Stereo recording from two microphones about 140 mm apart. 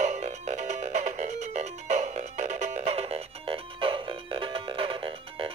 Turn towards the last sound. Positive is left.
turn(degrees=-40)  # may be behind; listen again after turning